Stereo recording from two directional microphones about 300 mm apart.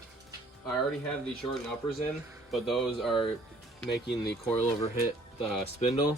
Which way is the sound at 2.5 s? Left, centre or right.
Centre.